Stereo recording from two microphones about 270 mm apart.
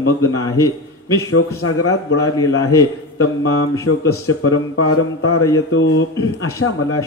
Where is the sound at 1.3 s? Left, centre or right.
Left.